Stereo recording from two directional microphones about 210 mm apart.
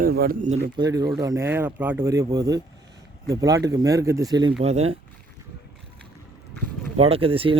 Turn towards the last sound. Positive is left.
turn(degrees=-25)  # may be behind; listen again after turning